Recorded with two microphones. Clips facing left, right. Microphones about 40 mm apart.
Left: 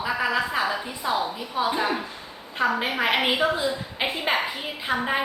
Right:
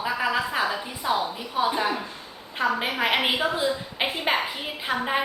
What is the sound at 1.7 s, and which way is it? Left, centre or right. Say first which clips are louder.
A woman's voice: even; centre.